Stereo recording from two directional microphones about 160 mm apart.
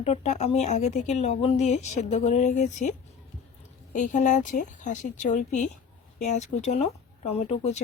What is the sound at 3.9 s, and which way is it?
Speech, 50° left (ahead or behind).